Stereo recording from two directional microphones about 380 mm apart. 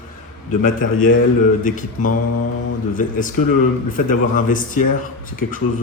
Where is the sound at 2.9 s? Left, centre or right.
Left.